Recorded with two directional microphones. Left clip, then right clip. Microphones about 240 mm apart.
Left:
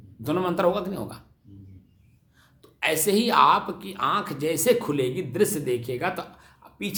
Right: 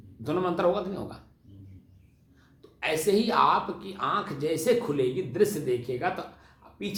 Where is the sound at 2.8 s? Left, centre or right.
Left.